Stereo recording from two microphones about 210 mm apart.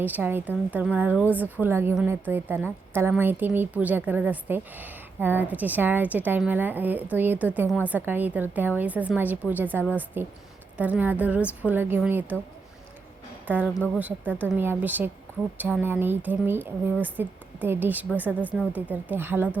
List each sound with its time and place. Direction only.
0.0 s a woman's voice: 10° right (ahead or behind)
14.0 s a woman's voice: 10° right (ahead or behind)